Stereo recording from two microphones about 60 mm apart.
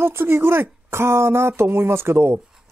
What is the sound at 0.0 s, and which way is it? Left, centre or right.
Speech, right.